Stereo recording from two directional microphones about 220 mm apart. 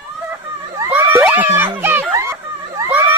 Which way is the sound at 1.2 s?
5° right (ahead or behind).